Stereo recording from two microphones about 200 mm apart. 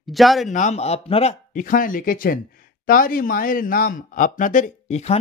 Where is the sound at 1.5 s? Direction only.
40° left (ahead or behind).